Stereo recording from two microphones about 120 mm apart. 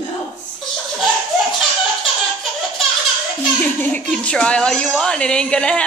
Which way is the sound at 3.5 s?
15° left (ahead or behind).